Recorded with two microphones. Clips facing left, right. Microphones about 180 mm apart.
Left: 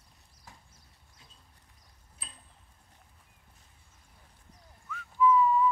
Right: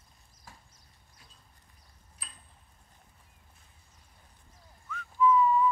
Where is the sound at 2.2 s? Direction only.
25° left (ahead or behind).